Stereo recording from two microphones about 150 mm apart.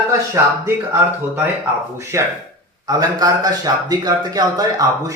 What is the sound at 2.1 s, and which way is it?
A man's voice, 20° right (ahead or behind).